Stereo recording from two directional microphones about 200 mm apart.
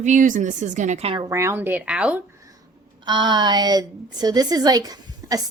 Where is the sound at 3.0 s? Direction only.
20° right (ahead or behind).